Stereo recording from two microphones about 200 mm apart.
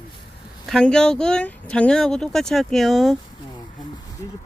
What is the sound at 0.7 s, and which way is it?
Speech, 5° left (ahead or behind).